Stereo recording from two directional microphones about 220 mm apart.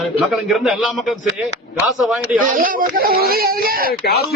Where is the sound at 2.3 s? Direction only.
40° right (ahead or behind).